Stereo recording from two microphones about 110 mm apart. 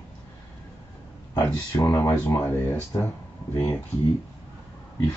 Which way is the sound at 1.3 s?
25° left (ahead or behind).